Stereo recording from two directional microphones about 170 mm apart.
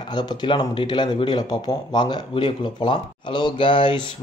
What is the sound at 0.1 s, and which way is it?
Speech, 25° left (ahead or behind).